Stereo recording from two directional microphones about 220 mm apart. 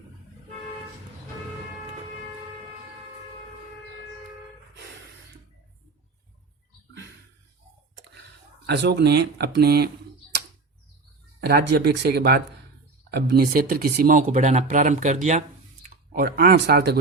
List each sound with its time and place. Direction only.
8.6 s speech: 50° right (ahead or behind)
11.3 s speech: 45° right (ahead or behind)